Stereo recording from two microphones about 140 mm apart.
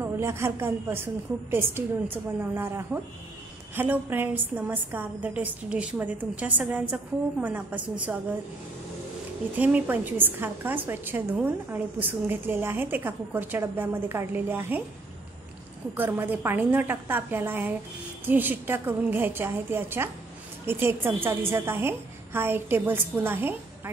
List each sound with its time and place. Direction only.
0.0 s a woman's voice: 20° right (ahead or behind)
9.6 s a woman's voice: 10° right (ahead or behind)
16.0 s a woman's voice: 15° right (ahead or behind)